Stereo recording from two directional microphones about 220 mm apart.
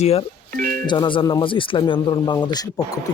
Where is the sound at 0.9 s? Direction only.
20° left (ahead or behind).